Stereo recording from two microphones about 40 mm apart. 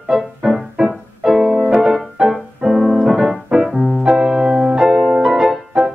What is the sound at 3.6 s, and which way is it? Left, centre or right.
Music, centre.